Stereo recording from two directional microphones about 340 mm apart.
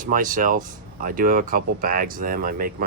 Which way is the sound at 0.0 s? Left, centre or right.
Right.